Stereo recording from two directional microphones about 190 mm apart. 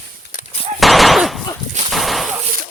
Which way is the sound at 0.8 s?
Centre (ahead or behind).